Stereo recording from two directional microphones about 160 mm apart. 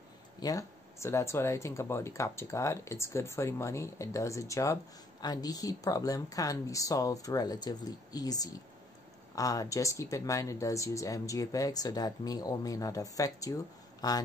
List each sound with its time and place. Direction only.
0.4 s speech: 20° left (ahead or behind)